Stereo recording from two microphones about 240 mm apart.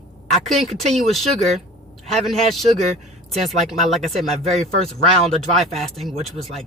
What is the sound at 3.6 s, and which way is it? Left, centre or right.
A woman's voice, centre.